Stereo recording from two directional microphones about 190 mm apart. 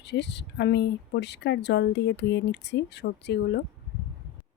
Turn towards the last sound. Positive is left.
turn(degrees=60)  # may be behind; listen again after turning